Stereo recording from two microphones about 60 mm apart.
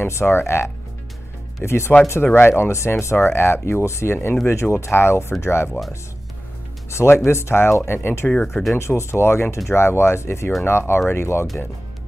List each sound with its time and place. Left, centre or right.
0.0 s speech: left
6.9 s speech: left
8.3 s speech: centre
8.7 s speech: left